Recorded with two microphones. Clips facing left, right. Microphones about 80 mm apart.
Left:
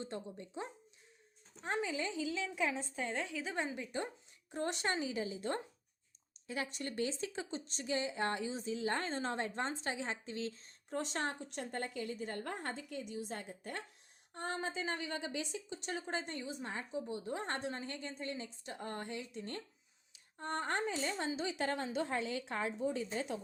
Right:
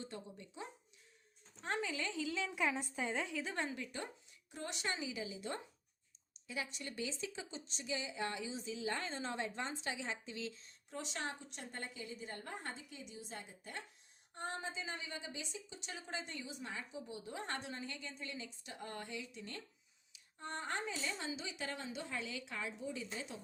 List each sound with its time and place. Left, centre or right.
0.0 s a woman's voice: left
1.6 s speech: centre
2.1 s a woman's voice: centre
3.6 s speech: centre
4.5 s a woman's voice: left
15.8 s a woman's voice: left